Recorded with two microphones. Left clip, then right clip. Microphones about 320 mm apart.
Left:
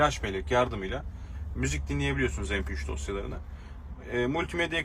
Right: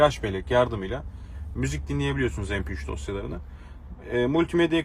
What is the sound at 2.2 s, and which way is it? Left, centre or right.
Speech, right.